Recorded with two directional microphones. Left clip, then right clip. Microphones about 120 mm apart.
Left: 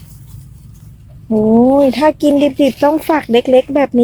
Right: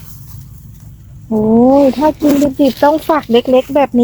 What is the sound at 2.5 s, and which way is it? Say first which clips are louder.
Speech: right 1 dB; 35° left (ahead or behind).